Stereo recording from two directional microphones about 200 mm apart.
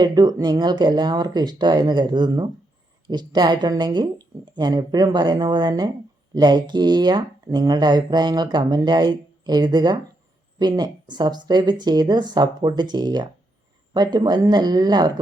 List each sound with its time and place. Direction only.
0.0 s speech: 20° right (ahead or behind)